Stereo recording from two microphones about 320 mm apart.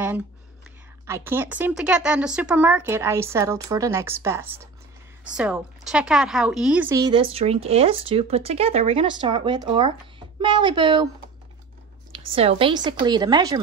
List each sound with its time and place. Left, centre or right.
1.0 s a woman's voice: centre
12.4 s speech: centre